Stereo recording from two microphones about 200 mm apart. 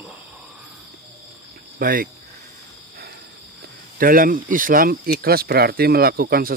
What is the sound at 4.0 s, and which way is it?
Speech, 45° right (ahead or behind).